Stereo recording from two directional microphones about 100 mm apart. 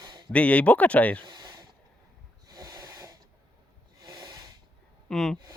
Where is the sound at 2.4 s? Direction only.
40° right (ahead or behind).